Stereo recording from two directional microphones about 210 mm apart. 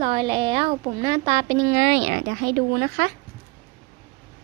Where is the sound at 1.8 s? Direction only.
45° right (ahead or behind).